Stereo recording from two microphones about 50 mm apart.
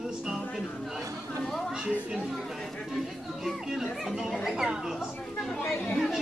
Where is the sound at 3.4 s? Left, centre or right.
Centre.